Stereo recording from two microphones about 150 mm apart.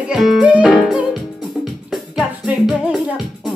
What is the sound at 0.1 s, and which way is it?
Music, 5° right (ahead or behind).